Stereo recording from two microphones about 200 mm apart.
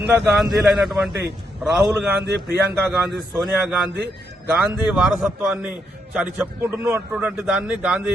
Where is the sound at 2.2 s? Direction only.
55° right (ahead or behind).